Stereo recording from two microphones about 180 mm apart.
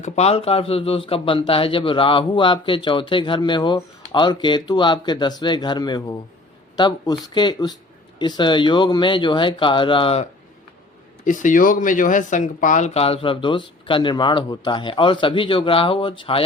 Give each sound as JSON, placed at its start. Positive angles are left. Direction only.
{"t": 0.0, "sound": "speech", "side_deg": 35}
{"t": 11.3, "sound": "speech", "side_deg": 45}